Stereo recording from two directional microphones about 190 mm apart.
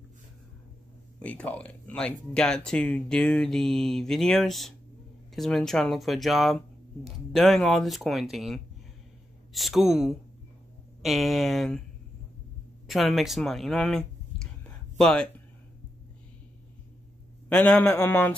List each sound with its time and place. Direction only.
1.2 s speech: 5° left (ahead or behind)
12.8 s a sound: centre (ahead or behind)
17.5 s a man's voice: 5° left (ahead or behind)